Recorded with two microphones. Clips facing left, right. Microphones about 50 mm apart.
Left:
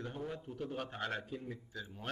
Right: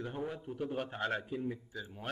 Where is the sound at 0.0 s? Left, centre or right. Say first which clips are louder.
Right 3 dB; centre.